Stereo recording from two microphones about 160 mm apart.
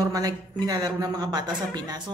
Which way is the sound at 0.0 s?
25° right (ahead or behind).